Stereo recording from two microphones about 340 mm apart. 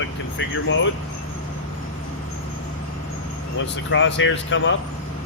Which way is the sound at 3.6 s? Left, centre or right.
Left.